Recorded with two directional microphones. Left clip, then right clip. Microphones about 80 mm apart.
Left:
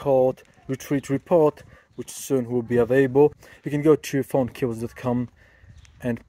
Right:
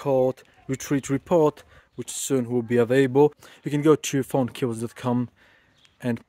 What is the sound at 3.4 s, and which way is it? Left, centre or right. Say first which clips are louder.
Speech: left 1 dB; right.